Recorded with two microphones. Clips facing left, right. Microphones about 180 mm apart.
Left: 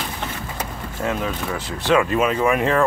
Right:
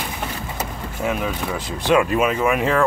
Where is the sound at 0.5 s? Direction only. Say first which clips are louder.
Right 1 dB; 15° right (ahead or behind).